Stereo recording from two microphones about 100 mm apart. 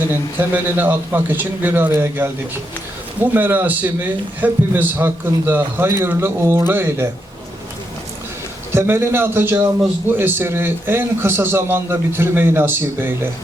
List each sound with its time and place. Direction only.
0.1 s a man's voice: 20° right (ahead or behind)
3.3 s a man's voice: 20° right (ahead or behind)
8.7 s a man's voice: 25° right (ahead or behind)